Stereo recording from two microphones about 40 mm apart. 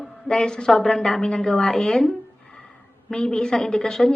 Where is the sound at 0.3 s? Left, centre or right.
Centre.